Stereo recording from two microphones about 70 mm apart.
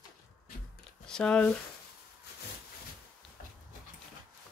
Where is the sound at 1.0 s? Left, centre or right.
Centre.